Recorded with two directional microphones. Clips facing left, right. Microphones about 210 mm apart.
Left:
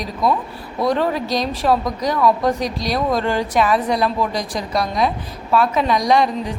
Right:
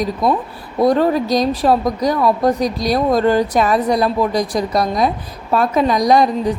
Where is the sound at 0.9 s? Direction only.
40° right (ahead or behind).